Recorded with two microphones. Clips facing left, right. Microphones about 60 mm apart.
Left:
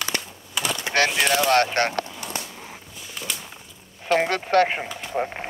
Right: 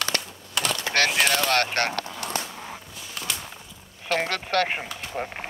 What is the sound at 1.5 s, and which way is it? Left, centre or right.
Speech, left.